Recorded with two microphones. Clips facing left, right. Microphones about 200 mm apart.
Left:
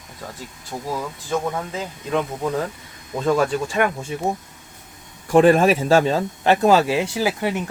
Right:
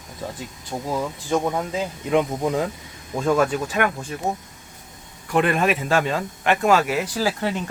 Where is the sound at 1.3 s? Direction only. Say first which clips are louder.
Right 1 dB; 15° right (ahead or behind).